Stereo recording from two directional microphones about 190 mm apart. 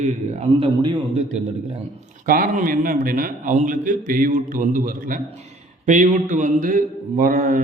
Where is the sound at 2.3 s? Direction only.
45° right (ahead or behind).